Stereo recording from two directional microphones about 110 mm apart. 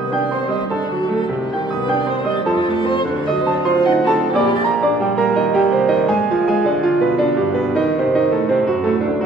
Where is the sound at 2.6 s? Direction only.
50° left (ahead or behind).